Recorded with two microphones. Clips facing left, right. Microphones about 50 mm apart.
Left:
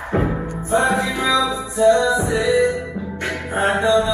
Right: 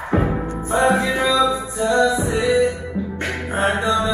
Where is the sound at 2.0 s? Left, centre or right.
Left.